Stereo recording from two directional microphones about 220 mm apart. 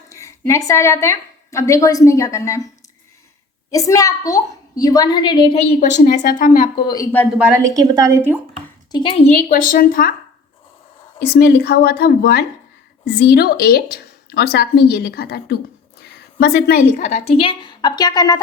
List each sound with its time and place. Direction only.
0.1 s a woman's voice: 15° left (ahead or behind)
3.7 s a child's voice: 15° left (ahead or behind)
5.8 s a woman's voice: 35° left (ahead or behind)
6.7 s a child's voice: 15° left (ahead or behind)
7.3 s a woman's voice: 5° right (ahead or behind)
8.9 s a woman's voice: 20° left (ahead or behind)
9.5 s a woman's voice: 40° left (ahead or behind)
11.3 s a woman's voice: 45° left (ahead or behind); by 18.3 s 20° left (ahead or behind)